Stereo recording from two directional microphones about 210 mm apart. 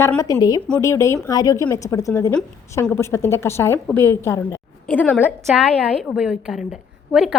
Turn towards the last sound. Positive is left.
turn(degrees=-5)  # may be behind; listen again after turning